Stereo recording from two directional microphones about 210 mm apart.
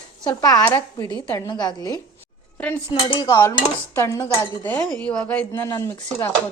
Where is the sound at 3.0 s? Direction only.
20° left (ahead or behind).